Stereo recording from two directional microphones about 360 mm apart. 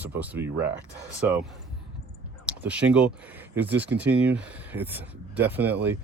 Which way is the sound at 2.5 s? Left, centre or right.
Centre.